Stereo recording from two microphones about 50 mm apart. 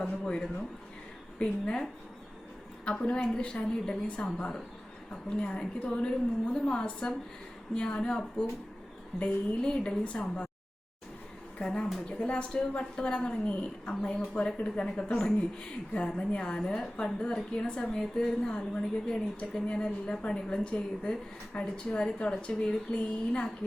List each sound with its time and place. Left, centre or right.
0.0 s a woman's voice: centre
2.8 s a woman's voice: centre
11.6 s a woman's voice: left
16.6 s a woman's voice: centre